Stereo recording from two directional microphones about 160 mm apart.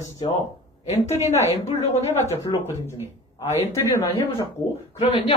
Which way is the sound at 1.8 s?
40° left (ahead or behind).